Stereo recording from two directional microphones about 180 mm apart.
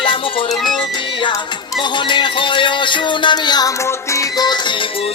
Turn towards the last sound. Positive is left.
turn(degrees=20)  # may be behind; listen again after turning